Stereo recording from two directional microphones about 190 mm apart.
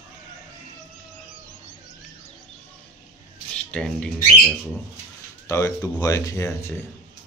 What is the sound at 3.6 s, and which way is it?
Speech, 5° left (ahead or behind).